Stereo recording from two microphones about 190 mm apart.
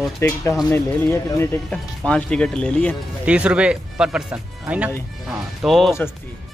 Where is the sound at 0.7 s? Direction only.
15° left (ahead or behind).